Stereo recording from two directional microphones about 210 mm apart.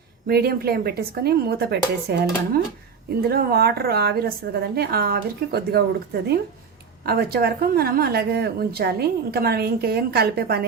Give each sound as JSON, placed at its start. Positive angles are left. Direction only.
{"t": 0.3, "sound": "a woman's voice", "side_deg": -45}
{"t": 7.0, "sound": "a woman's voice", "side_deg": -50}